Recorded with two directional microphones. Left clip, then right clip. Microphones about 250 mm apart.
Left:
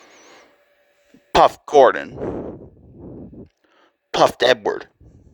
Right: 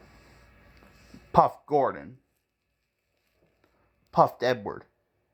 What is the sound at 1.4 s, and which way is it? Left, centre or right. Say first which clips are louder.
Speech: left 10 dB; left.